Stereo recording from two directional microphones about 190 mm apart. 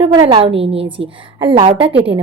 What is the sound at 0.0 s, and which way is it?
A woman's voice, 25° right (ahead or behind).